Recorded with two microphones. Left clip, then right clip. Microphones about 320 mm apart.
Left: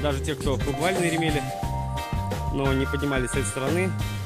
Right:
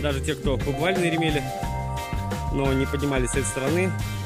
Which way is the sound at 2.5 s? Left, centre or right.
Centre.